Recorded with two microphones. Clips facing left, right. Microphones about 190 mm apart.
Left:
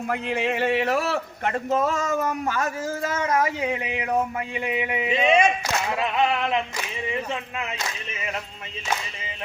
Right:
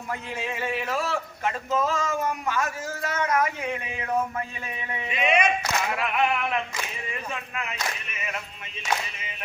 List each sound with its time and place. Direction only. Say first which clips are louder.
0.1 s a man's voice: left 6 dB; 70° left (ahead or behind); by 5.0 s 20° left (ahead or behind)
5.1 s a sound: left 3 dB; 30° left (ahead or behind)
7.1 s speech: left 5 dB; 25° left (ahead or behind)